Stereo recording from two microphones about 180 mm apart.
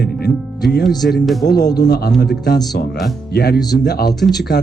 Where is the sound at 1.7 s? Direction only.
60° left (ahead or behind).